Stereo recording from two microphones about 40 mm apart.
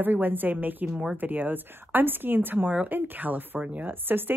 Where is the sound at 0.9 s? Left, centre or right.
Right.